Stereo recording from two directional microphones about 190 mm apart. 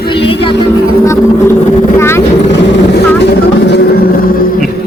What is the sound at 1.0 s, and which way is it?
Vehicle, 15° left (ahead or behind).